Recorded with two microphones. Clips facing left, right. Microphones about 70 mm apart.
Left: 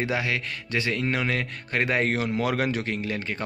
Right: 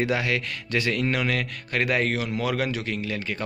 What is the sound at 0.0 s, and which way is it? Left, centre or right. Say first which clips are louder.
A man's voice: right 2 dB; centre.